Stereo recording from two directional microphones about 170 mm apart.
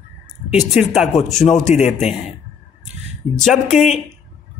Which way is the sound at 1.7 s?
40° left (ahead or behind).